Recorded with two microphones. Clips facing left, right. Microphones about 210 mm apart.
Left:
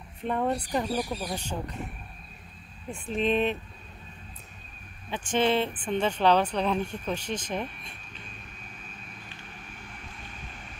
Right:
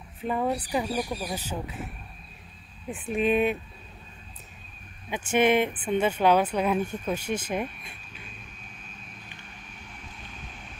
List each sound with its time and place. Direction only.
0.2 s speech: 5° right (ahead or behind)
3.2 s speech: 10° right (ahead or behind)
5.1 s speech: 10° right (ahead or behind)
10.0 s vehicle: centre (ahead or behind)